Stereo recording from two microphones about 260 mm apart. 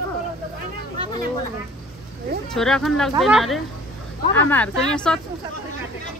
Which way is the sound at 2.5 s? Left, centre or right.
Centre.